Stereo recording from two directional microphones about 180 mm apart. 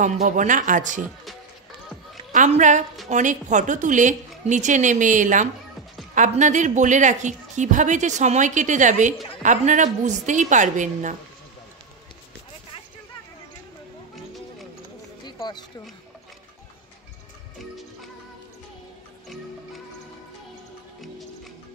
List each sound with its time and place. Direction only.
0.0 s a woman's voice: 45° right (ahead or behind)
2.3 s a woman's voice: 40° right (ahead or behind)
15.2 s a sound: 25° left (ahead or behind)